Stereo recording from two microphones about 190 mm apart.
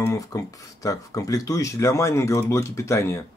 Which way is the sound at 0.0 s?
15° left (ahead or behind).